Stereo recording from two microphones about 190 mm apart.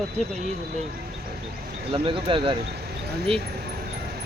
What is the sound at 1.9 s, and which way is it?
Speech, 30° right (ahead or behind).